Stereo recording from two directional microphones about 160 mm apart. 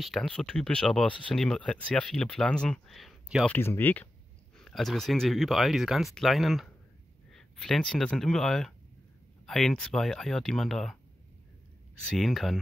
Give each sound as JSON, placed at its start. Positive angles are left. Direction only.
{"t": 0.0, "sound": "speech", "side_deg": 0}
{"t": 3.4, "sound": "speech", "side_deg": 10}
{"t": 12.1, "sound": "speech", "side_deg": 0}